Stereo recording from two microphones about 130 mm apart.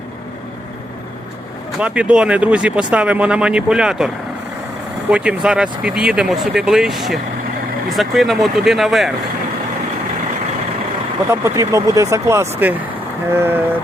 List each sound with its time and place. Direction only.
1.8 s speech: 10° right (ahead or behind)
5.1 s speech: 10° right (ahead or behind)
11.3 s speech: 20° right (ahead or behind)